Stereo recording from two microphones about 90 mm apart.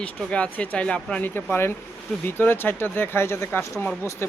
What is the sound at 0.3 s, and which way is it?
Speech, 15° left (ahead or behind).